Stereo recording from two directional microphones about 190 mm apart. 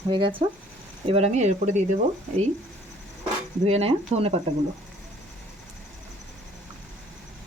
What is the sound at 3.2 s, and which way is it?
Speech, 35° right (ahead or behind).